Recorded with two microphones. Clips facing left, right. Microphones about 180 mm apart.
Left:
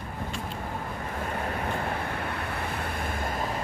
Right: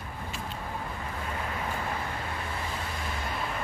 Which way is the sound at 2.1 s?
60° left (ahead or behind).